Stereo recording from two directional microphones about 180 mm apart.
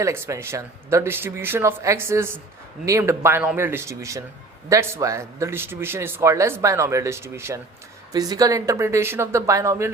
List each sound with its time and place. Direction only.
0.0 s a man's voice: 15° right (ahead or behind)